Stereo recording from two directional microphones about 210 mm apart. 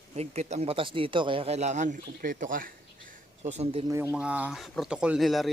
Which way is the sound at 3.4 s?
30° right (ahead or behind).